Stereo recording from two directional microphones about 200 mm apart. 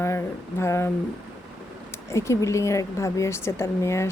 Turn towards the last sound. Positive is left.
turn(degrees=15)  # may be behind; listen again after turning